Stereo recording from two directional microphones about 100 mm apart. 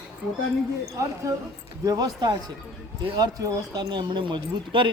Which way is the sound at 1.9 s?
40° right (ahead or behind).